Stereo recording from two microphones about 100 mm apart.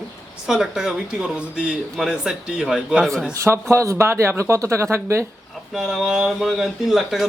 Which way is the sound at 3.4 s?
30° right (ahead or behind).